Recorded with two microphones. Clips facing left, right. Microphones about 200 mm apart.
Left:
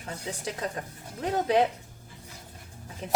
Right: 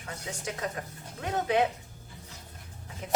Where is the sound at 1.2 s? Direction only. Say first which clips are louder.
Left 3 dB; 35° left (ahead or behind).